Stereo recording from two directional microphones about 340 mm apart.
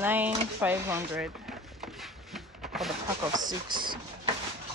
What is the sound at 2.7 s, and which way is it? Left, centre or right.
Speech, centre.